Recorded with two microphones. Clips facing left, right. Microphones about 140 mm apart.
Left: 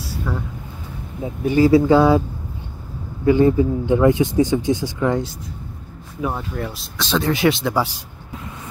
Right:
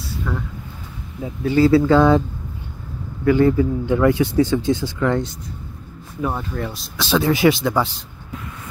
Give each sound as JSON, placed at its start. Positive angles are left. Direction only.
{"t": 0.3, "sound": "speech", "side_deg": 5}
{"t": 3.3, "sound": "speech", "side_deg": 20}
{"t": 6.2, "sound": "speech", "side_deg": 5}